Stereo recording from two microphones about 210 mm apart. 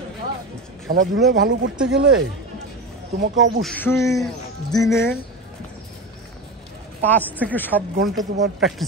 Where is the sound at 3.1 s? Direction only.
55° right (ahead or behind).